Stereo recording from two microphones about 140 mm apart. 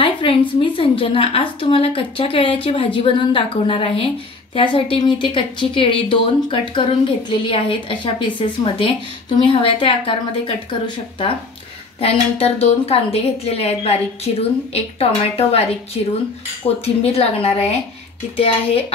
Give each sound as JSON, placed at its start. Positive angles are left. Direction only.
{"t": 0.0, "sound": "a woman's voice", "side_deg": 40}